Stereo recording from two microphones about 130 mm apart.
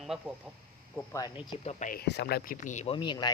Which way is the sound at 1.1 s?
25° left (ahead or behind).